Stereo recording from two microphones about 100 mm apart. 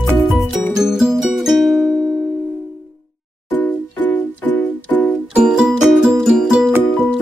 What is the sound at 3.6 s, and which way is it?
Music, 15° left (ahead or behind).